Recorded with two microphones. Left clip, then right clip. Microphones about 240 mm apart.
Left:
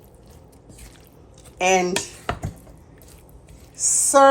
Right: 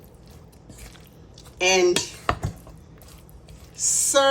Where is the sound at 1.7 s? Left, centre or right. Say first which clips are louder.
Right 3 dB; centre.